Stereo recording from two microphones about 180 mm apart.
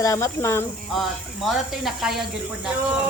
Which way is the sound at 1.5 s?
Centre (ahead or behind).